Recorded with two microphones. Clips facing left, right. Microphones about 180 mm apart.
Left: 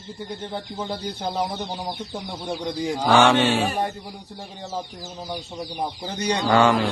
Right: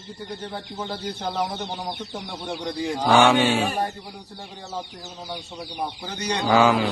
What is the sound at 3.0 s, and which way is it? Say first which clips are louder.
Mantra: even; centre (ahead or behind).